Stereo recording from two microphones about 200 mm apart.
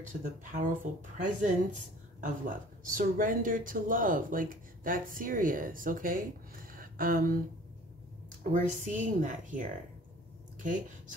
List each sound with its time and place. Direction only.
0.2 s a woman's voice: 45° right (ahead or behind)
8.5 s a woman's voice: 40° right (ahead or behind)